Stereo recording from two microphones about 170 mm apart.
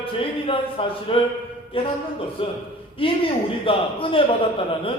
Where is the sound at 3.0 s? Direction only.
30° left (ahead or behind).